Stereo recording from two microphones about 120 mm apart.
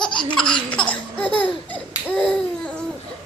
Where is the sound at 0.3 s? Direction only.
5° left (ahead or behind).